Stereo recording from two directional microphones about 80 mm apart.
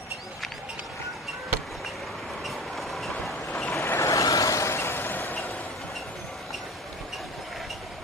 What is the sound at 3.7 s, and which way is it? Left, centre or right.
Vehicle, left.